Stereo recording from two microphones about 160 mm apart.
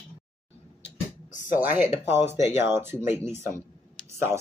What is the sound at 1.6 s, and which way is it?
Speech, 10° right (ahead or behind).